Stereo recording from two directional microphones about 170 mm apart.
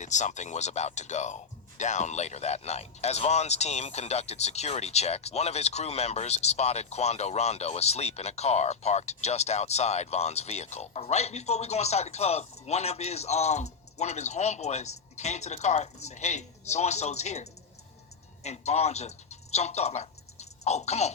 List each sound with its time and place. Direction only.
0.0 s speech: 45° left (ahead or behind)